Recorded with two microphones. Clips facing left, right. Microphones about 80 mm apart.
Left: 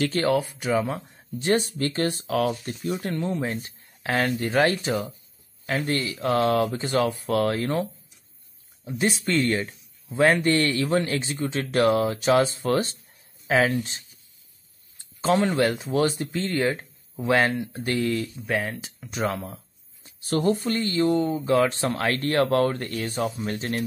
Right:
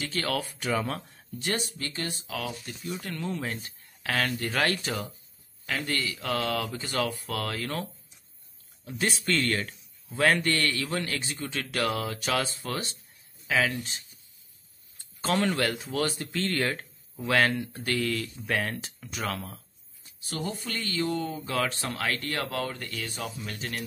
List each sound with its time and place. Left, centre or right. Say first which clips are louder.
0.2 s speech: left 8 dB; left
1.4 s speech: left 9 dB; left
3.1 s a man's voice: left 4 dB; left
8.8 s a man's voice: left 4 dB; centre; by 14.0 s left
15.2 s a man's voice: left 5 dB; centre
18.3 s speech: left 3 dB; centre
19.1 s a man's voice: left 6 dB; left
20.0 s speech: left 10 dB; left